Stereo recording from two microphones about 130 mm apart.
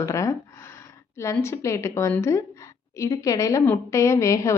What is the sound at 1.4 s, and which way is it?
A woman's voice, 20° left (ahead or behind).